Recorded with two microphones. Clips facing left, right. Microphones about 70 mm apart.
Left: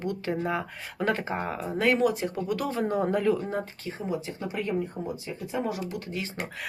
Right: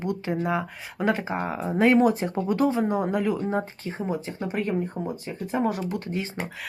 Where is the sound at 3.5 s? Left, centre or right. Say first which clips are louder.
Right 4 dB; right.